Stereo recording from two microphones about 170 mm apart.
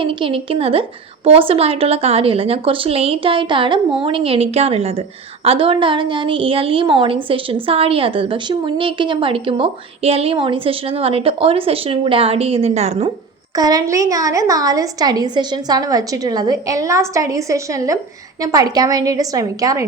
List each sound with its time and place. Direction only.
0.0 s a woman's voice: 30° right (ahead or behind)
13.6 s a woman's voice: 20° right (ahead or behind)